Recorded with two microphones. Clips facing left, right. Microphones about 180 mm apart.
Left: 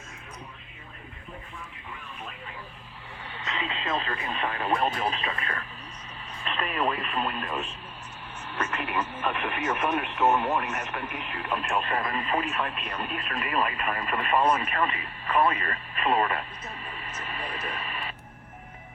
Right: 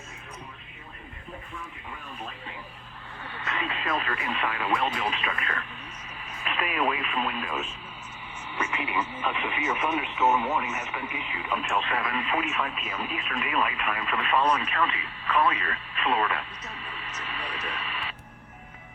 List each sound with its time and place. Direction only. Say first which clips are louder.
3.2 s speech: right 1 dB; 20° left (ahead or behind)
6.4 s radio: even; 5° right (ahead or behind)
7.0 s speech: even; centre (ahead or behind)
11.9 s speech: even; 40° left (ahead or behind)
12.3 s speech: left 1 dB; centre (ahead or behind)
13.8 s speech: left 1 dB; 40° left (ahead or behind)